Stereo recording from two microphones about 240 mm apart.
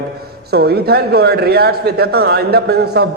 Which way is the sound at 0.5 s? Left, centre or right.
Right.